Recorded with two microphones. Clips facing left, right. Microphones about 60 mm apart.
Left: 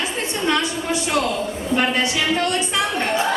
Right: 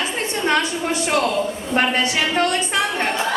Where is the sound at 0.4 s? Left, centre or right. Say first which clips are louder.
Right 1 dB; right.